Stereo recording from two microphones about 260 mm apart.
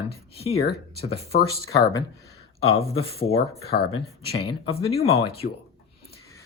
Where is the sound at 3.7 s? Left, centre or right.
Left.